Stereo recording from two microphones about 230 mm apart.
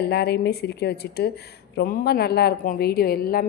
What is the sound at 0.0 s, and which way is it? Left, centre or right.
A woman's voice, left.